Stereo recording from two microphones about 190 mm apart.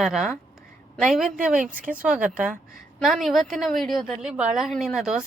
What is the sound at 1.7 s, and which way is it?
Speech, 45° right (ahead or behind).